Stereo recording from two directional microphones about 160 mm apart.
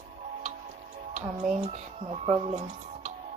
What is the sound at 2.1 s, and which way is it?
Speech, 40° right (ahead or behind).